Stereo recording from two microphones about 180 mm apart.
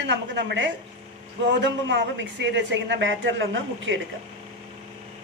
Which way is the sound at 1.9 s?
90° right.